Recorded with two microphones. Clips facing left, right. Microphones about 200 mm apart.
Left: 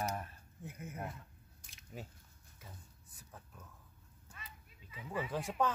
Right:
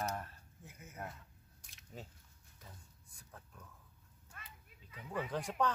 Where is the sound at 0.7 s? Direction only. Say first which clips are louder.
Left 9 dB; 55° left (ahead or behind).